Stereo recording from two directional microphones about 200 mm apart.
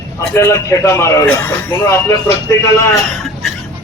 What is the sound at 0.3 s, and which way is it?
A man's voice, 15° left (ahead or behind).